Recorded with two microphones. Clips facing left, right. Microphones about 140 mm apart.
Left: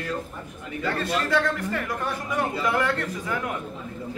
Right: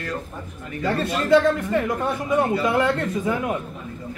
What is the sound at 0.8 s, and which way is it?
A man's voice, 20° right (ahead or behind).